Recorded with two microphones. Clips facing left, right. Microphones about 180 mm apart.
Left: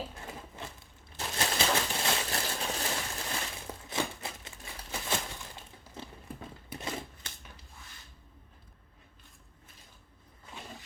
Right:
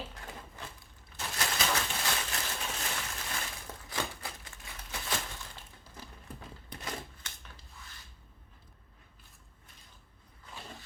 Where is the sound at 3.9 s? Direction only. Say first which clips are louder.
Left 3 dB; 25° left (ahead or behind).